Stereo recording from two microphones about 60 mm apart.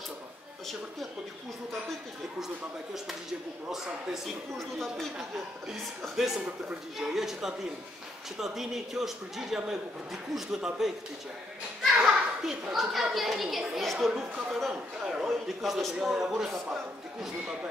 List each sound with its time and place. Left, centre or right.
2.4 s a man's voice: centre
6.1 s a man's voice: centre
12.0 s children playing: centre
12.7 s a man's voice: centre
14.1 s a man's voice: centre